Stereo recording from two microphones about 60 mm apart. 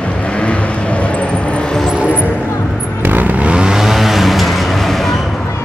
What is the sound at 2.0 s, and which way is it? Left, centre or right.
Music, right.